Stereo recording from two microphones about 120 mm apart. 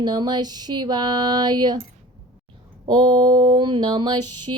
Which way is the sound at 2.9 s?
40° right (ahead or behind).